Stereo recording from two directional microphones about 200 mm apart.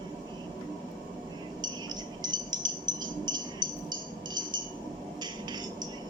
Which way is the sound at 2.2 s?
20° right (ahead or behind).